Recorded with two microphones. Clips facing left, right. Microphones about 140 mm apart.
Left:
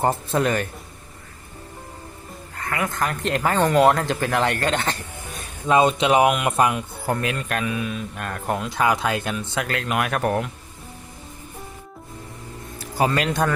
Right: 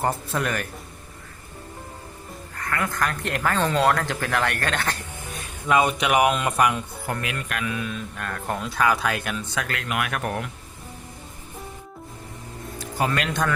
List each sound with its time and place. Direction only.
0.0 s speech: 25° left (ahead or behind)
2.6 s frog: 25° left (ahead or behind)
2.9 s speech: 20° left (ahead or behind)
7.7 s speech: 20° left (ahead or behind); by 10.4 s 35° left (ahead or behind)
13.0 s speech: 35° left (ahead or behind)